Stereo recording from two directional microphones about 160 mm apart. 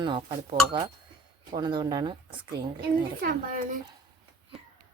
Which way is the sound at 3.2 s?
55° right (ahead or behind).